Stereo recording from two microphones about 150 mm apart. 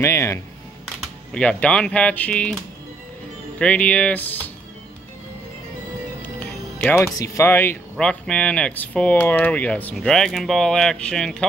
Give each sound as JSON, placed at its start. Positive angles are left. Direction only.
{"t": 0.0, "sound": "music", "side_deg": 15}
{"t": 0.8, "sound": "speech", "side_deg": 5}
{"t": 6.8, "sound": "speech", "side_deg": 15}